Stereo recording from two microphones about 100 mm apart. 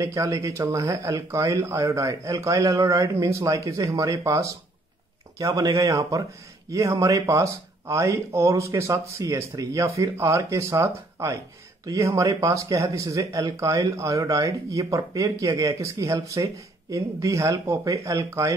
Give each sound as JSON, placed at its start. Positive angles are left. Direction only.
{"t": 0.0, "sound": "speech", "side_deg": -30}